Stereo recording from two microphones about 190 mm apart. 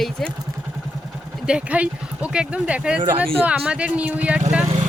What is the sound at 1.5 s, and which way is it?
Speech, 5° right (ahead or behind).